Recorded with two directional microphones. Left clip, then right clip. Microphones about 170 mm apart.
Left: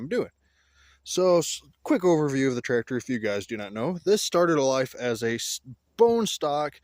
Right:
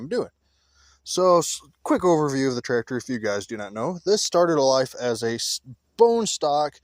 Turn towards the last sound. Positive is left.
turn(degrees=10)  # may be behind; listen again after turning